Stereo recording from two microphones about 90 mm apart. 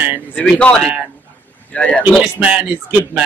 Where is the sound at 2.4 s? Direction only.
15° right (ahead or behind).